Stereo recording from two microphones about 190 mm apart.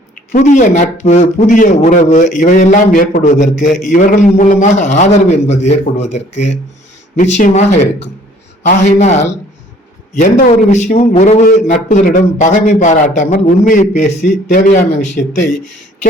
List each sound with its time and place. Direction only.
0.3 s a man's voice: 40° left (ahead or behind)